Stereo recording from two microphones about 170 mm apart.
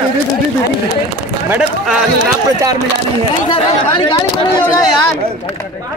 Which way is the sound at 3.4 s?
25° left (ahead or behind).